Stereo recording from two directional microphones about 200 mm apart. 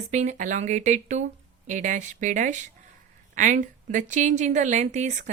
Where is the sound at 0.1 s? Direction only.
35° right (ahead or behind).